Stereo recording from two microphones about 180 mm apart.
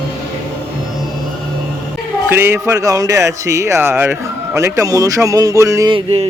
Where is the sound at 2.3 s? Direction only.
15° right (ahead or behind); by 6.3 s 30° right (ahead or behind).